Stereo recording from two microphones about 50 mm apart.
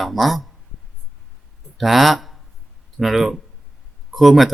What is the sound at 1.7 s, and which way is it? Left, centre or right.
Speech, centre.